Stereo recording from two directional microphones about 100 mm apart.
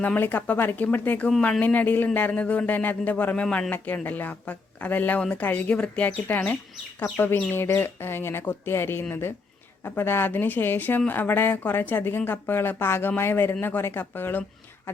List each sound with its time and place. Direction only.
0.0 s speech: 20° left (ahead or behind)